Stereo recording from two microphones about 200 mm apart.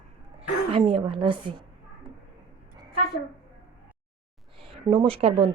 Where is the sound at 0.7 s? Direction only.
25° right (ahead or behind).